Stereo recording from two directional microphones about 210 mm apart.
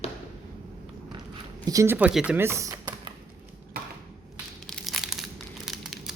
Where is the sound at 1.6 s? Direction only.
15° right (ahead or behind).